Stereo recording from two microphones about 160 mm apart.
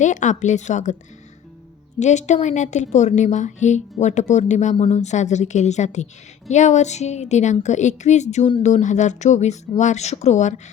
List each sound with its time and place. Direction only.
0.0 s a woman's voice: 50° left (ahead or behind)
2.0 s a woman's voice: 45° left (ahead or behind)